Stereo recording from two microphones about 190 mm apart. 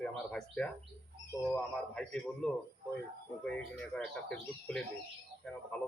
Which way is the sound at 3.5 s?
5° left (ahead or behind).